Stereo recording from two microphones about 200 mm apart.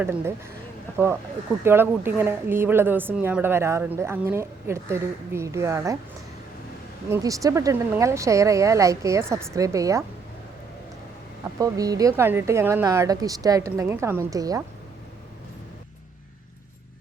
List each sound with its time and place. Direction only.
0.0 s a woman's voice: 10° right (ahead or behind)
7.1 s a woman's voice: 15° right (ahead or behind)
11.6 s a woman's voice: 20° right (ahead or behind)